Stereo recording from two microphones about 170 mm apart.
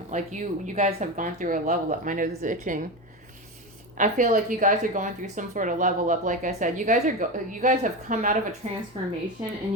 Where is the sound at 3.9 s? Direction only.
50° right (ahead or behind).